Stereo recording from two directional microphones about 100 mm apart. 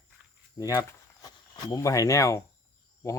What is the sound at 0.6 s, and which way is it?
Speech, 35° left (ahead or behind).